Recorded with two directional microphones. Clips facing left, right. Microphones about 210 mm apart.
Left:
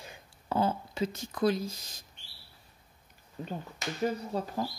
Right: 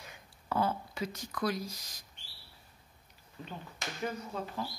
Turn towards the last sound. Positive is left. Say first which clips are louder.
# left 5 dB
turn(degrees=40)  # may be behind; listen again after turning